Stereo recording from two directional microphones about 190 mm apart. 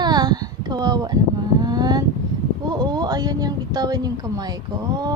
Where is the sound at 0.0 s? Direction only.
20° right (ahead or behind).